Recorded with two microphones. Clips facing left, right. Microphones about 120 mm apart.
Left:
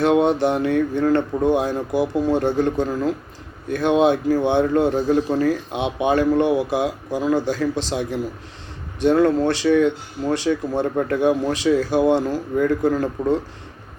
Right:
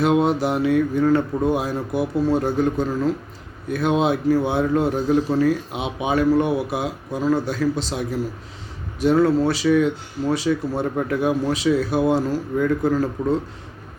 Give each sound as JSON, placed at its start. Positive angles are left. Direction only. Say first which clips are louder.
{"t": 0.0, "sound": "a man's voice", "louder": "left 2 dB", "side_deg": 0}